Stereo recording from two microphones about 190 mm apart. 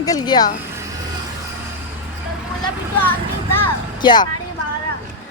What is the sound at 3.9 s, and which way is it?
Speech, 25° left (ahead or behind).